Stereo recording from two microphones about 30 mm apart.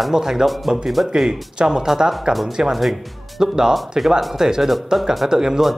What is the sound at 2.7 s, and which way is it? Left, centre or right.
Speech, centre.